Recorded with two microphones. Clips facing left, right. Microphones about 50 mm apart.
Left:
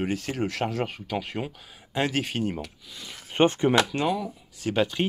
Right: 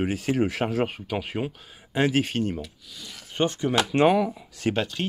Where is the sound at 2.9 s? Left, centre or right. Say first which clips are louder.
Left 1 dB; left.